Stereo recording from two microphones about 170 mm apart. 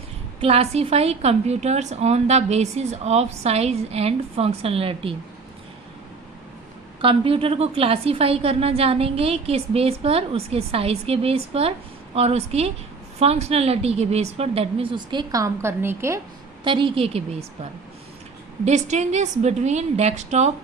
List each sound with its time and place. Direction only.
0.3 s a woman's voice: 35° right (ahead or behind)
7.0 s a woman's voice: 30° right (ahead or behind); by 16.2 s 15° right (ahead or behind)
16.6 s a woman's voice: 30° right (ahead or behind)